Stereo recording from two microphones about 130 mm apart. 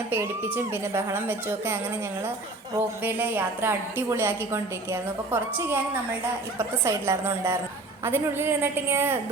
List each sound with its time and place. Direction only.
0.1 s a woman's voice: 15° right (ahead or behind)
3.0 s a woman's voice: 15° right (ahead or behind)